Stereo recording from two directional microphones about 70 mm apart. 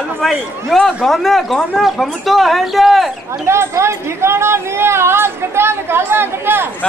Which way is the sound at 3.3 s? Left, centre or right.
Right.